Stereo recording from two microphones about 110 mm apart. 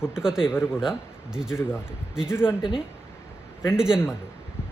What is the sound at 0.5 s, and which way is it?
Speech, 20° left (ahead or behind).